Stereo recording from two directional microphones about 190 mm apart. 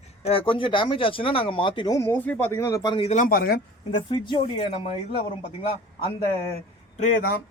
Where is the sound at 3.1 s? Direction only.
45° left (ahead or behind).